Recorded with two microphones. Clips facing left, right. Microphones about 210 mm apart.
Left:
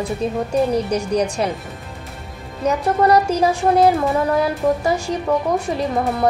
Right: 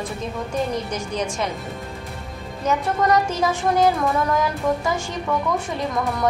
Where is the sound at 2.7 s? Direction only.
35° left (ahead or behind).